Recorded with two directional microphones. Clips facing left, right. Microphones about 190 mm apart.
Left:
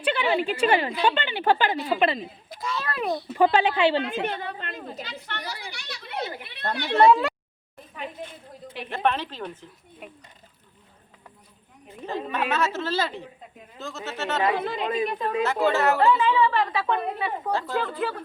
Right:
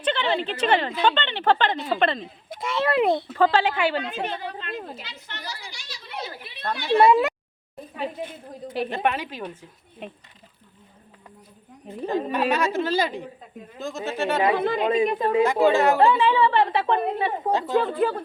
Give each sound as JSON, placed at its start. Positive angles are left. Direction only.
{"t": 0.0, "sound": "a woman's voice", "side_deg": 10}
{"t": 2.6, "sound": "a sound", "side_deg": -25}
{"t": 3.3, "sound": "a woman's voice", "side_deg": 15}
{"t": 4.1, "sound": "a woman's voice", "side_deg": 55}
{"t": 5.2, "sound": "a sound", "side_deg": 60}
{"t": 6.9, "sound": "a woman's voice", "side_deg": -10}
{"t": 8.9, "sound": "a woman's voice", "side_deg": -15}
{"t": 10.0, "sound": "a woman's voice", "side_deg": -25}
{"t": 12.0, "sound": "a woman's voice", "side_deg": -15}
{"t": 14.6, "sound": "speech", "side_deg": -55}
{"t": 14.8, "sound": "a woman's voice", "side_deg": -25}
{"t": 15.4, "sound": "a woman's voice", "side_deg": -15}
{"t": 16.0, "sound": "a woman's voice", "side_deg": -30}